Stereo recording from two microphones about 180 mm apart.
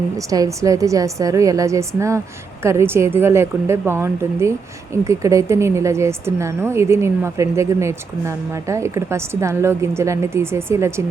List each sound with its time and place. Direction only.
0.3 s a woman's voice: 20° right (ahead or behind)